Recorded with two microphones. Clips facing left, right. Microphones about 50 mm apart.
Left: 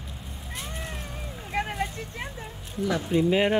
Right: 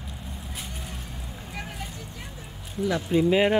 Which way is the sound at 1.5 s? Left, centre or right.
Left.